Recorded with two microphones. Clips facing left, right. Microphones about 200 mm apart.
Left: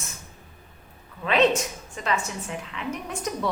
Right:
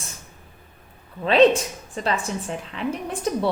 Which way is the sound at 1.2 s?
30° right (ahead or behind).